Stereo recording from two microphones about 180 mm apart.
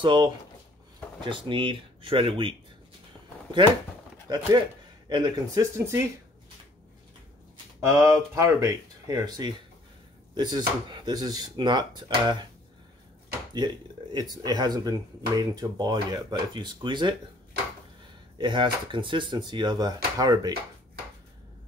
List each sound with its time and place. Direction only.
0.0 s speech: 25° right (ahead or behind)
4.3 s speech: 25° right (ahead or behind)
7.9 s speech: 15° right (ahead or behind)
14.1 s speech: 20° right (ahead or behind)
18.4 s speech: 25° right (ahead or behind)